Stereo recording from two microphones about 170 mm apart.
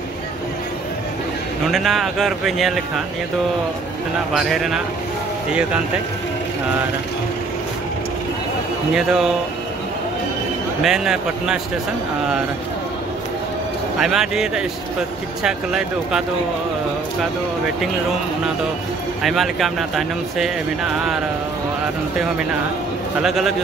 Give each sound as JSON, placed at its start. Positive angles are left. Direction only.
{"t": 1.7, "sound": "speech", "side_deg": 0}
{"t": 4.3, "sound": "speech", "side_deg": 0}
{"t": 8.9, "sound": "speech", "side_deg": 0}
{"t": 10.8, "sound": "speech", "side_deg": -5}
{"t": 13.9, "sound": "speech", "side_deg": -5}
{"t": 19.2, "sound": "speech", "side_deg": 0}
{"t": 23.2, "sound": "speech", "side_deg": 0}